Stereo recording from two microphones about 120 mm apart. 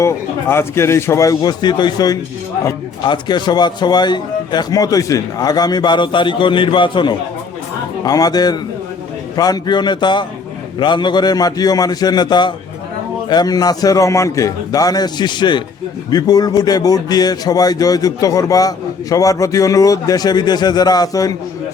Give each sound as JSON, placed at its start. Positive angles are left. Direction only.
{"t": 0.0, "sound": "a man's voice", "side_deg": 20}
{"t": 8.0, "sound": "a man's voice", "side_deg": 30}